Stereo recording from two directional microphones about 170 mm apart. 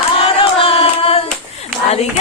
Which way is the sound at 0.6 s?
35° left (ahead or behind).